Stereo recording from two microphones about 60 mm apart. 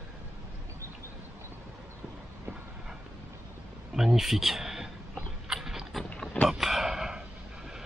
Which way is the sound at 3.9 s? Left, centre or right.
Centre.